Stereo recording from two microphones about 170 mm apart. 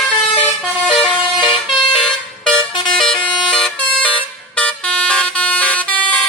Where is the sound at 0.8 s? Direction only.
Centre (ahead or behind).